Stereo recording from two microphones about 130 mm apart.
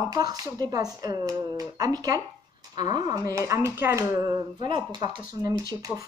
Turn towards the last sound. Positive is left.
turn(degrees=-25)  # may be behind; listen again after turning